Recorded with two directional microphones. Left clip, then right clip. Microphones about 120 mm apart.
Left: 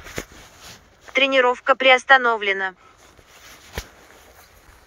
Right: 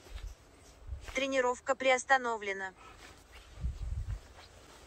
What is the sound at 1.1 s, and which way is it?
Speech, 10° right (ahead or behind).